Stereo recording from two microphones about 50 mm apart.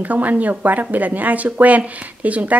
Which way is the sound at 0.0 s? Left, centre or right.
Right.